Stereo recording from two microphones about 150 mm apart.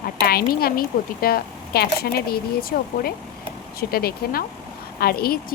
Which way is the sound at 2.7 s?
80° left.